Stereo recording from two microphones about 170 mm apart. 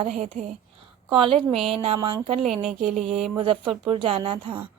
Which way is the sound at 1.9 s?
20° right (ahead or behind).